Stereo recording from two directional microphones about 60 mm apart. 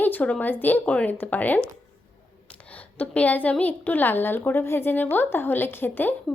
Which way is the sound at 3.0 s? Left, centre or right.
Left.